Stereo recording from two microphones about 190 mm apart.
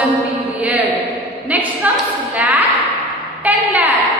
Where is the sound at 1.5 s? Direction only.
10° right (ahead or behind).